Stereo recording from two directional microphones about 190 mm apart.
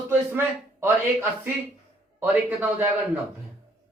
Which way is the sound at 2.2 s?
10° right (ahead or behind).